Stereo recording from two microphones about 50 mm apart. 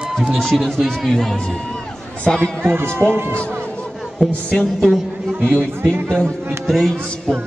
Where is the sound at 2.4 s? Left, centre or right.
Right.